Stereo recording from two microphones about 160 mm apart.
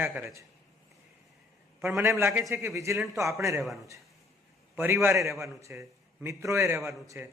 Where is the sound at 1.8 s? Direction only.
15° right (ahead or behind).